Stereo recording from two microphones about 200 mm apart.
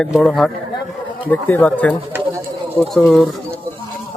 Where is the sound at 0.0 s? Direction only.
5° left (ahead or behind).